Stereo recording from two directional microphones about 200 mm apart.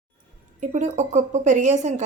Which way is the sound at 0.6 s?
40° right (ahead or behind).